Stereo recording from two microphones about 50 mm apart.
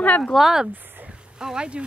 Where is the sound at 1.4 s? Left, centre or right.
Centre.